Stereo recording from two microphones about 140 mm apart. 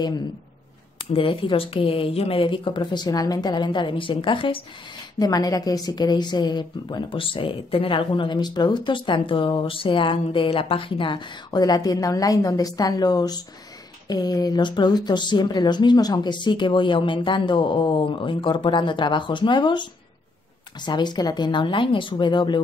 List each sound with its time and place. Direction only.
1.1 s a woman's voice: 40° left (ahead or behind)
5.2 s a woman's voice: 25° left (ahead or behind)